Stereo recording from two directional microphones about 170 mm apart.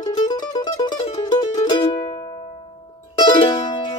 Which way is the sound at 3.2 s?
30° left (ahead or behind).